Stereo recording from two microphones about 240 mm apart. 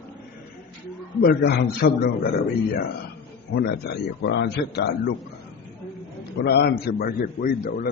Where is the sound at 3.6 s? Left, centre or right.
Left.